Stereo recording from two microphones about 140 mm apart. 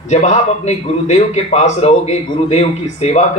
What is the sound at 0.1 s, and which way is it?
A man's voice, 50° left (ahead or behind).